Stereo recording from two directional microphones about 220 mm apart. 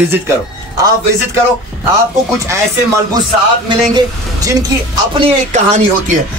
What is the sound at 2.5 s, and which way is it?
Speech, 15° right (ahead or behind).